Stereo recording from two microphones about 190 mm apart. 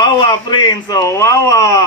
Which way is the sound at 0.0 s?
25° left (ahead or behind).